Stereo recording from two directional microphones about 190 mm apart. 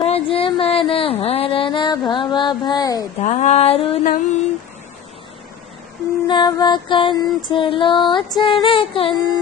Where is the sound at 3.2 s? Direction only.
40° left (ahead or behind).